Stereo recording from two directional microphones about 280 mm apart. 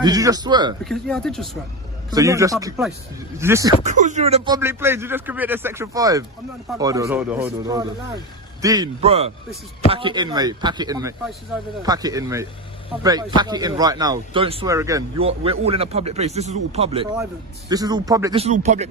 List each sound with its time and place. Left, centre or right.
0.0 s speech: centre
0.9 s speech: centre
2.0 s speech: centre
3.8 s a man's voice: right